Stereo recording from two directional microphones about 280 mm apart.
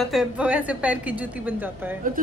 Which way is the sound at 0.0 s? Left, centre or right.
Centre.